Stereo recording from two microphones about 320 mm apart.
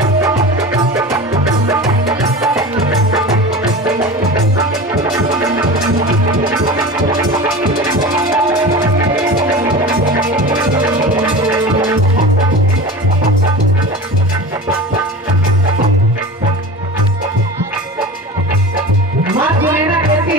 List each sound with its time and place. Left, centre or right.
1.7 s music: centre
8.2 s music: centre
11.2 s music: centre
19.3 s music: centre